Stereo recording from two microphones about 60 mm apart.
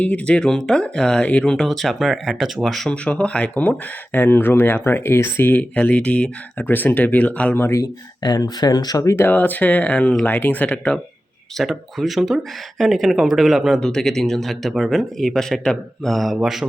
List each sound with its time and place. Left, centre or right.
0.0 s speech: left
0.3 s speech: centre
1.5 s speech: centre
2.9 s speech: centre
3.5 s speech: left
5.5 s speech: left
7.7 s speech: left
9.1 s speech: left
11.5 s speech: centre
13.7 s speech: centre
16.1 s speech: centre